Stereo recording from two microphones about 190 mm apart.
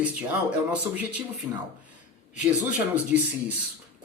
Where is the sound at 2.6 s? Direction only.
5° right (ahead or behind).